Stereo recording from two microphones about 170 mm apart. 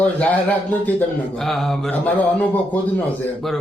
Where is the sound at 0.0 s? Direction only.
10° left (ahead or behind).